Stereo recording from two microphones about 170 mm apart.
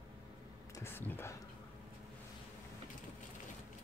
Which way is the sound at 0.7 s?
15° left (ahead or behind).